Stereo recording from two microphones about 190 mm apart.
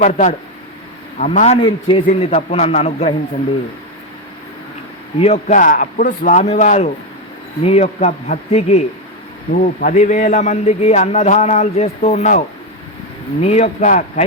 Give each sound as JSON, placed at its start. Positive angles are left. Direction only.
{"t": 0.0, "sound": "a man's voice", "side_deg": 40}
{"t": 5.2, "sound": "a man's voice", "side_deg": 35}
{"t": 9.8, "sound": "a man's voice", "side_deg": 40}
{"t": 13.4, "sound": "a man's voice", "side_deg": 35}